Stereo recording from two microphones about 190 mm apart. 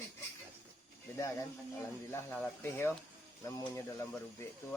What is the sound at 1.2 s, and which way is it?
Speech, 15° left (ahead or behind).